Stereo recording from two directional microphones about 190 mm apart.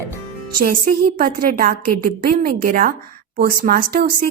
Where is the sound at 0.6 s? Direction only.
50° right (ahead or behind).